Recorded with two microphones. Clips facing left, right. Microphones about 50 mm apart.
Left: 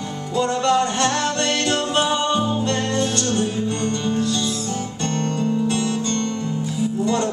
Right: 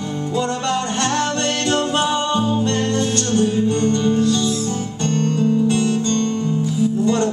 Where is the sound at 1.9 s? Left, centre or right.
Left.